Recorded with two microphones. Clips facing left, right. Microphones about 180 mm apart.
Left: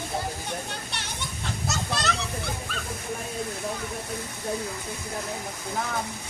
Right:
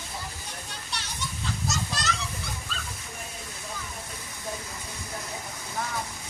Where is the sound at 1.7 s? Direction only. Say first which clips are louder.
Left 4 dB; 60° left (ahead or behind).